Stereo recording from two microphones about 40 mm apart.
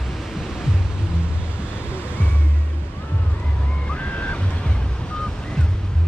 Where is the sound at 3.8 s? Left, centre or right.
Left.